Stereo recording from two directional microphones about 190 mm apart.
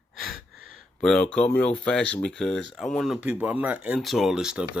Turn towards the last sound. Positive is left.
turn(degrees=-5)  # may be behind; listen again after turning